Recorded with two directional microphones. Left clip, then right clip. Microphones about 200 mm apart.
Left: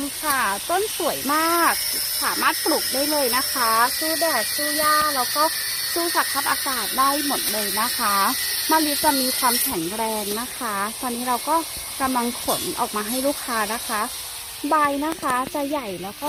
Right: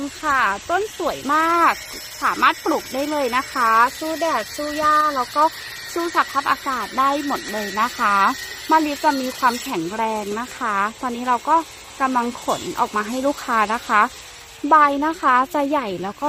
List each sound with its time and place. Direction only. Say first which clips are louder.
0.3 s speech: right 4 dB; 15° right (ahead or behind)
13.5 s speech: right 6 dB; 15° right (ahead or behind)